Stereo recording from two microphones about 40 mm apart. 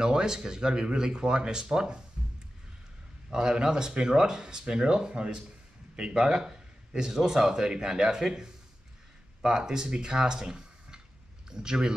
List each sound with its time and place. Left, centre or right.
0.0 s speech: centre
2.2 s a sound: right
3.3 s speech: centre